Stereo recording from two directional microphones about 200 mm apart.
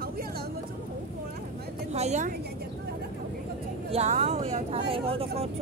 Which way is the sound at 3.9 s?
35° right (ahead or behind).